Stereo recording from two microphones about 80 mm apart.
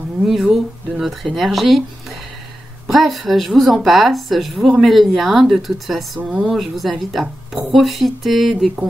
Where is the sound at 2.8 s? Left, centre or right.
Centre.